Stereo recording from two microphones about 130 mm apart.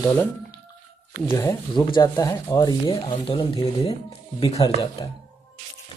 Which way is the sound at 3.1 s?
40° left (ahead or behind).